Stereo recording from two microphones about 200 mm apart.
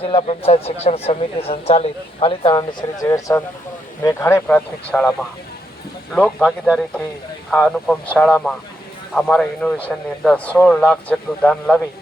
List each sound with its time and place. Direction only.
0.0 s a man's voice: 25° left (ahead or behind); by 5.1 s 5° left (ahead or behind)
6.1 s a man's voice: 5° left (ahead or behind)